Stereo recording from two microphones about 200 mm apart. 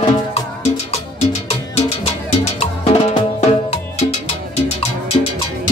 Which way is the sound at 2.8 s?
30° left (ahead or behind).